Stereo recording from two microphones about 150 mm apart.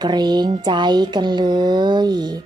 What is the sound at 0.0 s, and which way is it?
Speech, 30° right (ahead or behind).